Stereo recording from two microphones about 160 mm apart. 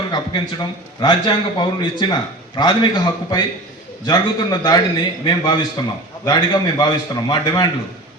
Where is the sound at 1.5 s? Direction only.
25° left (ahead or behind).